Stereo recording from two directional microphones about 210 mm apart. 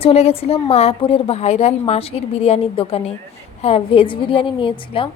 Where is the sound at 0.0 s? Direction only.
30° left (ahead or behind).